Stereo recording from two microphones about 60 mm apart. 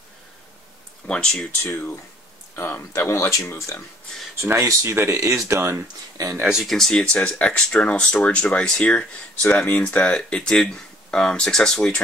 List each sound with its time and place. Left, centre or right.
1.0 s speech: centre
1.6 s speech: left
2.9 s speech: left
4.6 s speech: right
6.2 s speech: right
6.5 s speech: centre